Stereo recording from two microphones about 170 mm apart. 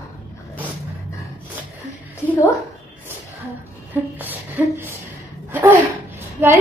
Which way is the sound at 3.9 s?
10° right (ahead or behind).